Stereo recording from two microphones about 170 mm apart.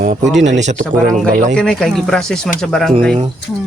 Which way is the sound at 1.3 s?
45° right (ahead or behind).